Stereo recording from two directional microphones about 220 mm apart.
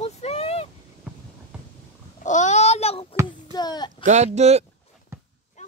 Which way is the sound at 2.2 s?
35° left (ahead or behind).